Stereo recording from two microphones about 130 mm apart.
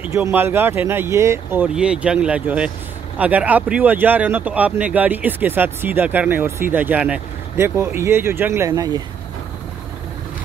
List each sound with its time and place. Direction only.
0.0 s speech: 15° right (ahead or behind)
1.7 s speech: 5° right (ahead or behind); by 9.0 s 25° right (ahead or behind)